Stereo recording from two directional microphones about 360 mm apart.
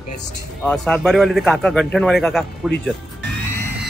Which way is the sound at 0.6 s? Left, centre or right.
Centre.